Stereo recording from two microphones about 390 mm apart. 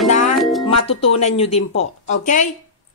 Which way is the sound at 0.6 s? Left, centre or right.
Centre.